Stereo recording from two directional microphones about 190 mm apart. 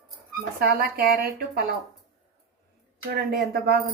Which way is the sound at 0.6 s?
55° right (ahead or behind).